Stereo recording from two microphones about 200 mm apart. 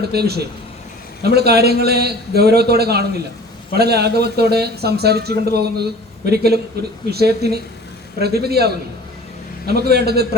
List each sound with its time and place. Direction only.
0.0 s speech: 50° right (ahead or behind)